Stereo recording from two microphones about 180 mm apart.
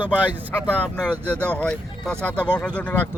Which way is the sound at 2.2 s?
10° left (ahead or behind).